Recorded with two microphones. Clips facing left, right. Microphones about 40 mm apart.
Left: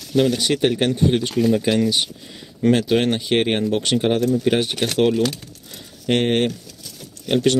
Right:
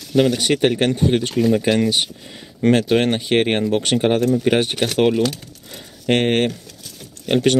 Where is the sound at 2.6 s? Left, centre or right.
Right.